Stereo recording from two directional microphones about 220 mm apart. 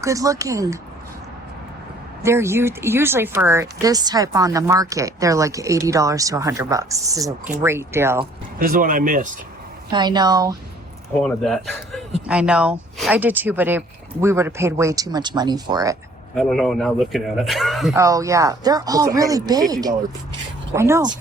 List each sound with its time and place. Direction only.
0.0 s speech: 15° right (ahead or behind)
2.2 s speech: 10° right (ahead or behind)
8.5 s speech: 40° right (ahead or behind)
9.9 s a woman's voice: 20° right (ahead or behind)
11.2 s a man's voice: centre (ahead or behind); by 16.0 s 15° right (ahead or behind)
16.3 s a man's voice: centre (ahead or behind)
17.9 s speech: 15° right (ahead or behind)
20.7 s speech: 10° right (ahead or behind)